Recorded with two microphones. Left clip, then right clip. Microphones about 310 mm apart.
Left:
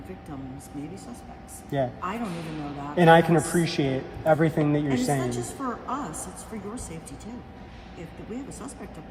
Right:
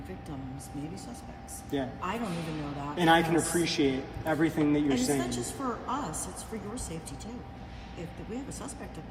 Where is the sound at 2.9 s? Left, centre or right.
Left.